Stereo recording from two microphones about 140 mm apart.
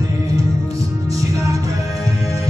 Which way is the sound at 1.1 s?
25° right (ahead or behind).